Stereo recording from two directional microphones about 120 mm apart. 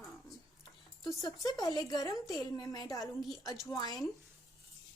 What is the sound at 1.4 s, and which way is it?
A woman's voice, 30° left (ahead or behind).